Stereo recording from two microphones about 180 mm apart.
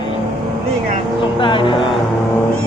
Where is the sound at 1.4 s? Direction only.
25° left (ahead or behind).